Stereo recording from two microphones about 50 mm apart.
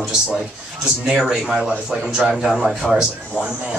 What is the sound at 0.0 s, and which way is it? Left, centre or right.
Speech, centre.